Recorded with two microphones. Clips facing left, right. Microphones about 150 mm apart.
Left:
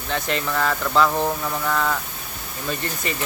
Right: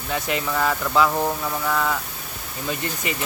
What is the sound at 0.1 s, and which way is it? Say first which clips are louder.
Speech: even; 10° right (ahead or behind).